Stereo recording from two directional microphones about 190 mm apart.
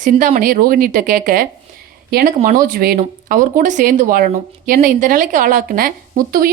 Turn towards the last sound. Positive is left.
turn(degrees=-50)  # may be behind; listen again after turning